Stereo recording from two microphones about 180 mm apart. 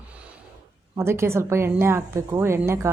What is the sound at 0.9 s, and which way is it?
A woman's voice, 15° right (ahead or behind).